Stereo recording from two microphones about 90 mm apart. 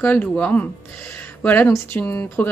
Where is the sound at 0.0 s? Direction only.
20° left (ahead or behind).